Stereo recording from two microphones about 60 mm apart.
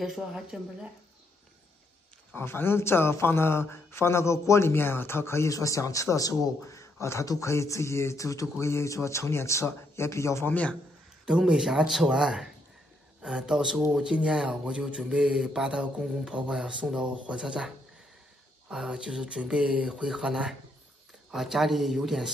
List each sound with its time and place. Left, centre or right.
0.0 s speech: centre
2.3 s a man's voice: left
5.5 s a man's voice: left
11.2 s speech: centre